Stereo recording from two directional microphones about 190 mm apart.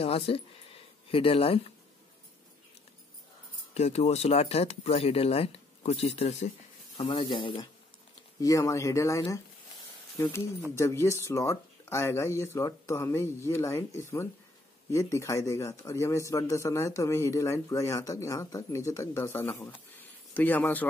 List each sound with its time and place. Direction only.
0.0 s a sound: 30° left (ahead or behind)
1.1 s speech: 30° left (ahead or behind)
3.7 s a man's voice: 35° left (ahead or behind); by 20.8 s 10° left (ahead or behind)